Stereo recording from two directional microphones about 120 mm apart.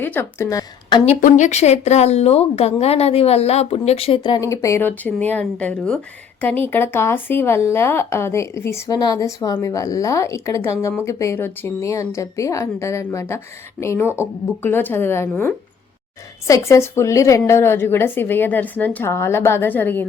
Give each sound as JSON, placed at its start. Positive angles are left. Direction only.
{"t": 0.0, "sound": "a woman's voice", "side_deg": 20}
{"t": 1.0, "sound": "speech", "side_deg": 80}
{"t": 4.4, "sound": "a woman's voice", "side_deg": 25}